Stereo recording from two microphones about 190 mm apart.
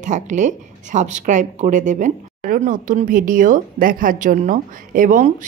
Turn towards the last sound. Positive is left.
turn(degrees=-45)  # may be behind; listen again after turning